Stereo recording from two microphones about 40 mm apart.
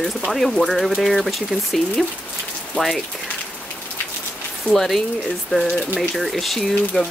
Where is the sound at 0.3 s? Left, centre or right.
Centre.